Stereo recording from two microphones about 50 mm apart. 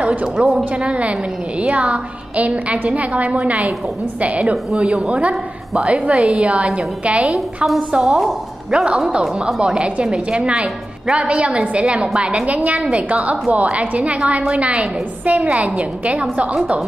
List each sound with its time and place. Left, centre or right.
0.0 s a woman's voice: right
4.7 s a woman's voice: centre
7.3 s a woman's voice: centre
7.9 s speech: centre
8.2 s a woman's voice: centre
9.6 s a woman's voice: centre